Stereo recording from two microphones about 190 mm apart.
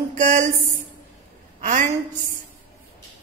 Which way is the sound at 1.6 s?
40° right (ahead or behind).